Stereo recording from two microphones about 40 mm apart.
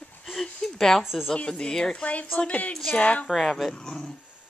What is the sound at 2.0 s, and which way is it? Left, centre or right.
Speech, left.